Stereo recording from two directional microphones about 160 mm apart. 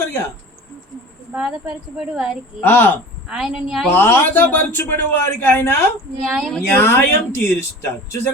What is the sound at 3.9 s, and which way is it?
A man's voice, 10° left (ahead or behind).